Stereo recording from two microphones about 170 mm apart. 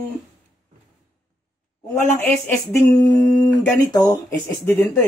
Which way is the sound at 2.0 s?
10° left (ahead or behind).